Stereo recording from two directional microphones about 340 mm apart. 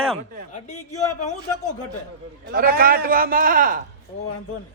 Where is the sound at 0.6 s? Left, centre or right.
Left.